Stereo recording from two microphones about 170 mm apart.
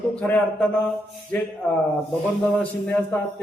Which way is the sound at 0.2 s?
5° left (ahead or behind).